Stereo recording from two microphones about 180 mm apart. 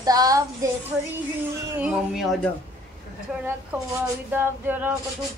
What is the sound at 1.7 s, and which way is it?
Speech, 5° right (ahead or behind).